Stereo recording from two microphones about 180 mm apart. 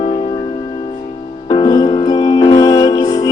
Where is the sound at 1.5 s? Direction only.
20° left (ahead or behind).